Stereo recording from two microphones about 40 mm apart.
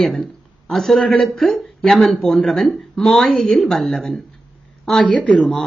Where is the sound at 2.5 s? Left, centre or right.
Centre.